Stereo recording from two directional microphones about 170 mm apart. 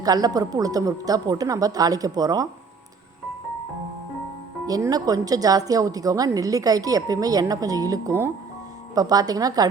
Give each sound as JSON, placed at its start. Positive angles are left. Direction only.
{"t": 0.0, "sound": "speech", "side_deg": -20}
{"t": 4.6, "sound": "speech", "side_deg": -20}